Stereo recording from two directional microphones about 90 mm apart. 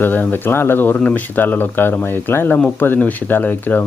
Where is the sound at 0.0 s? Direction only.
20° left (ahead or behind).